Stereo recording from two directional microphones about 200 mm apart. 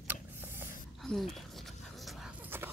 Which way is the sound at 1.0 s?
Centre (ahead or behind).